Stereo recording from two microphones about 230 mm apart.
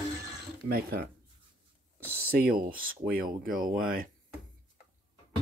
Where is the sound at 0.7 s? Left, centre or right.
Right.